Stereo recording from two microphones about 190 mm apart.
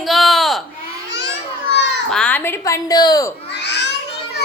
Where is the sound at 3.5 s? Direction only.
65° left (ahead or behind).